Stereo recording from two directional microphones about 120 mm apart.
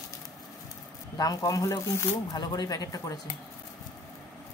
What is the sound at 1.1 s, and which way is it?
Speech, 30° left (ahead or behind).